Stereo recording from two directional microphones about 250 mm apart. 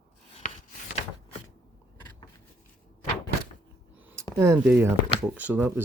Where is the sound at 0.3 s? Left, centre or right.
Left.